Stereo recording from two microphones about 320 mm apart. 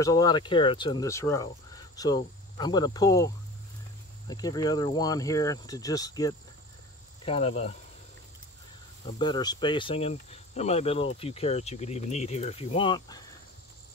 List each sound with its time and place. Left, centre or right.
0.0 s speech: centre
4.3 s speech: centre
9.2 s speech: centre